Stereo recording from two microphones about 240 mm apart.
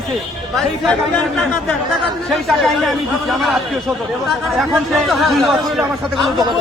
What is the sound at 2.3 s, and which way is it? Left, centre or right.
Speech, centre.